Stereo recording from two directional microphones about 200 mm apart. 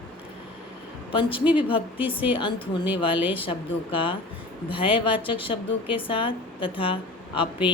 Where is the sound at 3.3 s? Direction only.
25° left (ahead or behind).